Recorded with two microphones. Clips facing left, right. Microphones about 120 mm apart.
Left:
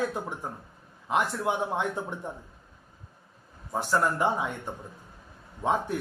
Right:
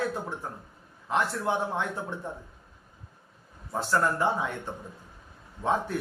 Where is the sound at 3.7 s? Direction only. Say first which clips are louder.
Even; 15° left (ahead or behind).